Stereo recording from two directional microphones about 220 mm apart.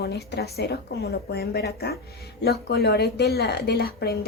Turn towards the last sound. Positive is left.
turn(degrees=45)  # may be behind; listen again after turning